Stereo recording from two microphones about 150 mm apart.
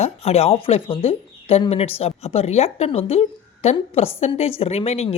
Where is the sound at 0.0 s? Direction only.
45° left (ahead or behind).